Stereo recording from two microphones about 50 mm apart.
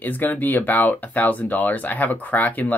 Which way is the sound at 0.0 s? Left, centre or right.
Left.